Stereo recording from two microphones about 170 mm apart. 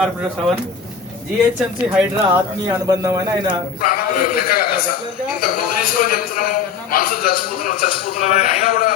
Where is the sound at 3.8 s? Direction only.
60° left (ahead or behind).